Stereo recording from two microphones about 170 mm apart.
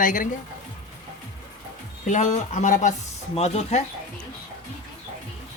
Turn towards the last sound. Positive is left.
turn(degrees=40)  # may be behind; listen again after turning